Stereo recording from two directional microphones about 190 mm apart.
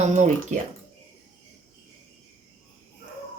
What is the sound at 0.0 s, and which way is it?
Speech, 40° right (ahead or behind).